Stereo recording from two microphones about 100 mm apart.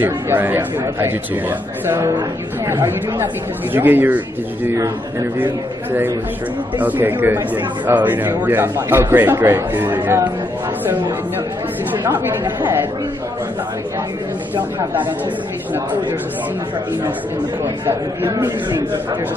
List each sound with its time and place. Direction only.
0.0 s speech: 20° right (ahead or behind)
6.8 s speech: 20° right (ahead or behind)
12.0 s speech: 20° right (ahead or behind)
14.5 s speech: 15° right (ahead or behind)